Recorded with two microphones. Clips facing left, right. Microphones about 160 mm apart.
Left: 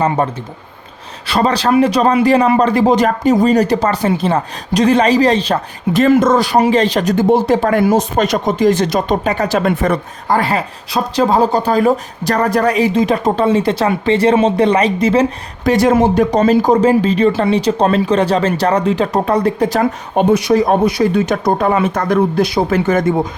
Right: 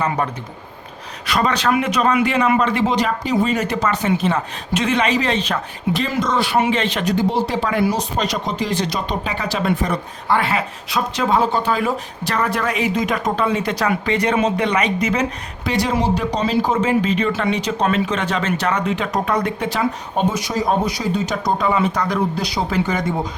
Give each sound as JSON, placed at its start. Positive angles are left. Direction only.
{"t": 0.2, "sound": "speech", "side_deg": 30}
{"t": 5.9, "sound": "speech", "side_deg": 50}
{"t": 10.3, "sound": "speech", "side_deg": 35}
{"t": 15.6, "sound": "speech", "side_deg": 50}
{"t": 20.1, "sound": "speech", "side_deg": 65}